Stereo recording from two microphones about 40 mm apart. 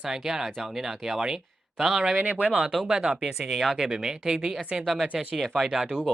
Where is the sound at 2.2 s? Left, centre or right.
Right.